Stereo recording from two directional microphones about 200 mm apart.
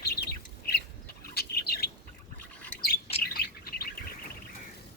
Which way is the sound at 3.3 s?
50° left (ahead or behind).